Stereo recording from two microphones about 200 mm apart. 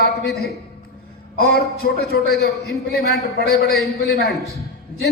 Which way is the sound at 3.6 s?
Centre (ahead or behind).